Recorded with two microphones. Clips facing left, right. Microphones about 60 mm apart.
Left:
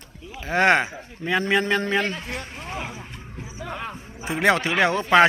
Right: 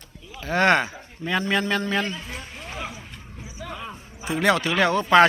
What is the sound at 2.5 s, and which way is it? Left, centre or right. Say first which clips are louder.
Speech: left 2 dB; left.